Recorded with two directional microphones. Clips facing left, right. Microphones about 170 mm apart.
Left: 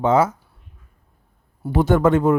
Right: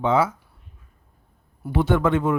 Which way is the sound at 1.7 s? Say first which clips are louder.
Left 4 dB; 40° left (ahead or behind).